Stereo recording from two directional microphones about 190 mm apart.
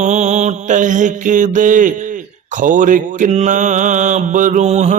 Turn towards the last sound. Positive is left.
turn(degrees=-35)  # may be behind; listen again after turning